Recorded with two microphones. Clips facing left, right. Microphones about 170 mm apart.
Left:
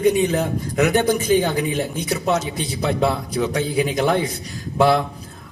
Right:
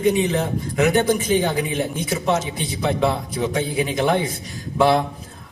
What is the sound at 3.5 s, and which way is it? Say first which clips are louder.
Speech: left 1 dB; 45° left (ahead or behind).